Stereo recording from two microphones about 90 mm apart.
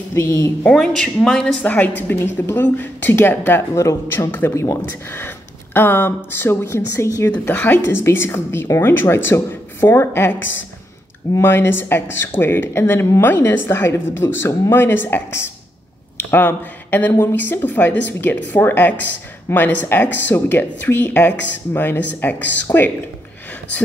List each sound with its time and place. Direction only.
0.1 s a woman's voice: 35° left (ahead or behind)
0.7 s a woman's voice: 5° left (ahead or behind); by 7.2 s 30° left (ahead or behind)
7.2 s speech: 20° left (ahead or behind)